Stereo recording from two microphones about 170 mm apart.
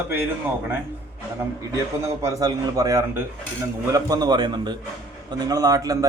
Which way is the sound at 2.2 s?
20° right (ahead or behind).